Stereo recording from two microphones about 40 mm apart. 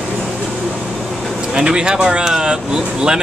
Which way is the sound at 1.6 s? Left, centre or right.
Centre.